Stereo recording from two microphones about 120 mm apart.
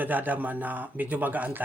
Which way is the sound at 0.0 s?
15° right (ahead or behind).